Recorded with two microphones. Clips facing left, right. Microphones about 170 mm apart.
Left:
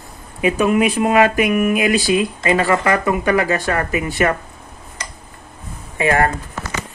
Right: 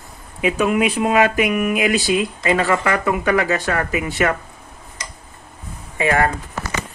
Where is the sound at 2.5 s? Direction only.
35° left (ahead or behind).